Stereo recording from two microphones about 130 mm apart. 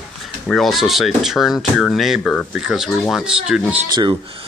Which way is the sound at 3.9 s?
35° right (ahead or behind).